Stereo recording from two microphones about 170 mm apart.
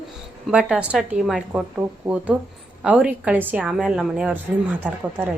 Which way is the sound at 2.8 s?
5° right (ahead or behind).